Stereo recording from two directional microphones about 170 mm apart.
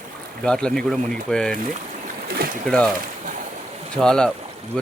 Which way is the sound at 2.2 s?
65° right (ahead or behind).